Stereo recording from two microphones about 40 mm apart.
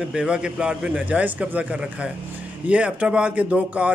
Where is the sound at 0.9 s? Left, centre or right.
Right.